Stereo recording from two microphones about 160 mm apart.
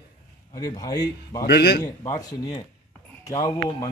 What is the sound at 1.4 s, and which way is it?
Speech, 80° left.